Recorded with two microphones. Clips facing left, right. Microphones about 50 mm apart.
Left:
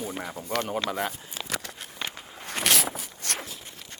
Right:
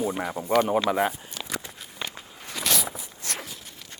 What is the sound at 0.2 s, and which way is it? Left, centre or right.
Speech, right.